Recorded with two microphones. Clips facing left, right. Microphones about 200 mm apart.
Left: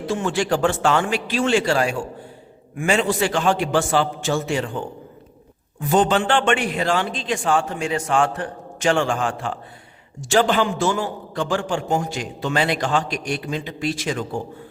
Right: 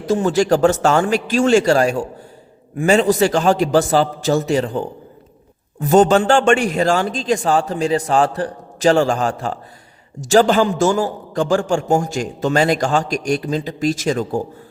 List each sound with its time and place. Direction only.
0.0 s a man's voice: 40° right (ahead or behind)